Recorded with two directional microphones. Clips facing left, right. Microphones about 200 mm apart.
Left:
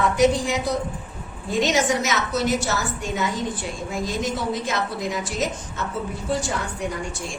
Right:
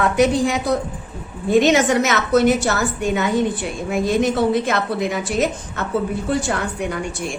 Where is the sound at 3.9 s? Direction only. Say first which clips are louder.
Right 9 dB; 60° right (ahead or behind).